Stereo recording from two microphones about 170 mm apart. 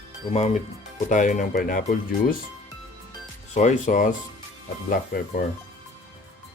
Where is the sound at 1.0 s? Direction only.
45° left (ahead or behind).